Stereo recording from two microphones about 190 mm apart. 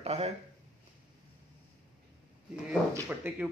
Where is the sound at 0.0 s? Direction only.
30° right (ahead or behind).